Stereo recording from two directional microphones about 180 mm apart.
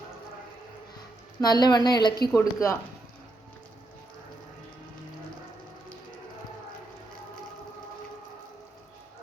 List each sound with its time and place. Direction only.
1.4 s a woman's voice: 20° left (ahead or behind)